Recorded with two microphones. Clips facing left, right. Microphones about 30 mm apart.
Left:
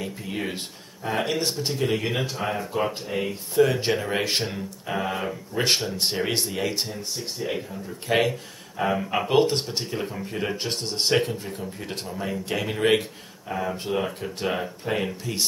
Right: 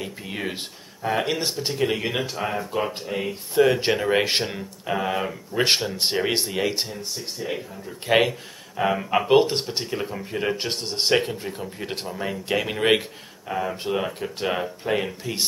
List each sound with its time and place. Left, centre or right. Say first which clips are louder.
0.0 s speech: even; centre
3.5 s speech: right 2 dB; centre
6.9 s speech: even; centre
8.1 s speech: right 3 dB; centre